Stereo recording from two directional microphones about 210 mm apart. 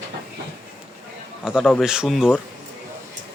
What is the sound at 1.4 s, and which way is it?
Speech, centre (ahead or behind).